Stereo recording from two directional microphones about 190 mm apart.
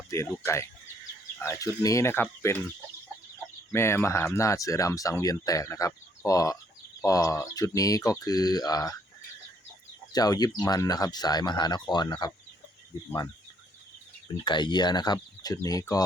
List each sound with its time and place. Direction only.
0.1 s speech: 15° left (ahead or behind)
3.7 s speech: 15° left (ahead or behind)
10.1 s speech: 20° left (ahead or behind)
14.4 s speech: 25° left (ahead or behind)